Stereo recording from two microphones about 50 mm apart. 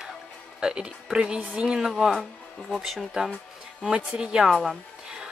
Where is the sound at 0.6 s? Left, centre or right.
Centre.